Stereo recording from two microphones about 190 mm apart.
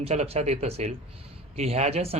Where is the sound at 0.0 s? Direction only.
35° right (ahead or behind).